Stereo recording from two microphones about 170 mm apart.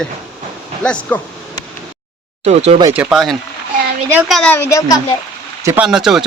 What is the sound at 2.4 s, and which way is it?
Speech, 40° right (ahead or behind).